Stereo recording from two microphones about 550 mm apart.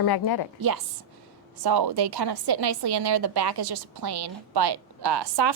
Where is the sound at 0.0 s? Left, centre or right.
Left.